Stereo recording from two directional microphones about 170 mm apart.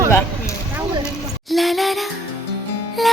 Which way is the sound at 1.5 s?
Centre (ahead or behind).